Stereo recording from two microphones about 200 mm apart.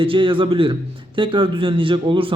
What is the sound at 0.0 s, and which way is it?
Speech, 25° right (ahead or behind).